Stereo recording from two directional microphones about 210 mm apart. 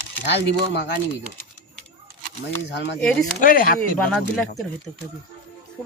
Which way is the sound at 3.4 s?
40° left (ahead or behind).